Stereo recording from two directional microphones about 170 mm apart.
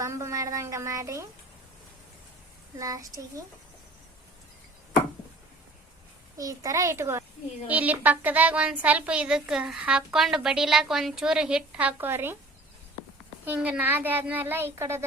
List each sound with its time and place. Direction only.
0.0 s a woman's voice: 15° right (ahead or behind)
2.7 s a child's voice: 20° right (ahead or behind)
6.3 s a child's voice: 20° right (ahead or behind)
13.4 s a woman's voice: 10° right (ahead or behind)